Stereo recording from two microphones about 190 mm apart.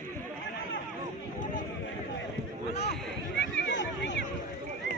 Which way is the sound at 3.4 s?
70° left (ahead or behind).